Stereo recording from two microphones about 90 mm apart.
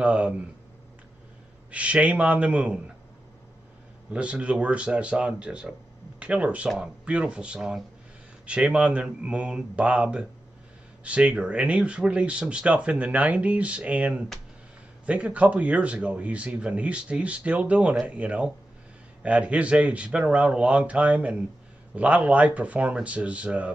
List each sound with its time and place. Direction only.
0.0 s speech: 15° right (ahead or behind)
1.7 s speech: 15° right (ahead or behind)
4.1 s speech: 15° right (ahead or behind)